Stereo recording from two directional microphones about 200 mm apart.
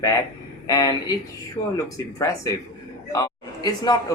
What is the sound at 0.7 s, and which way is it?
A man's voice, 20° left (ahead or behind).